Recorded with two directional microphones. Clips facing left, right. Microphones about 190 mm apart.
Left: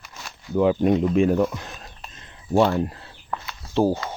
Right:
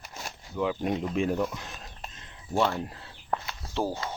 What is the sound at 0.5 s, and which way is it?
Speech, 50° left (ahead or behind).